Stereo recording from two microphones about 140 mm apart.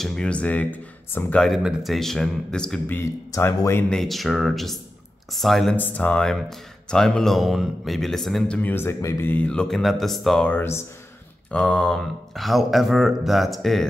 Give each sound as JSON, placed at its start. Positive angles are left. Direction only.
{"t": 0.0, "sound": "speech", "side_deg": 5}
{"t": 1.4, "sound": "speech", "side_deg": 0}
{"t": 3.0, "sound": "speech", "side_deg": 20}
{"t": 3.9, "sound": "speech", "side_deg": 0}
{"t": 8.5, "sound": "speech", "side_deg": 15}